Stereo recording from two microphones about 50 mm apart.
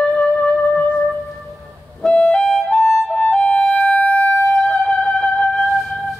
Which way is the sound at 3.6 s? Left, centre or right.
Left.